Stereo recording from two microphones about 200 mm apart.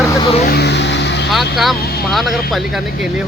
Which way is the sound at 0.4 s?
50° left (ahead or behind).